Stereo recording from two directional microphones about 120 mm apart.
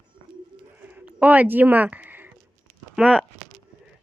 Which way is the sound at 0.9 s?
10° right (ahead or behind).